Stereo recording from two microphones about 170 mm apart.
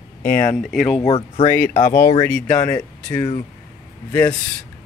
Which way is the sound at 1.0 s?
40° left (ahead or behind).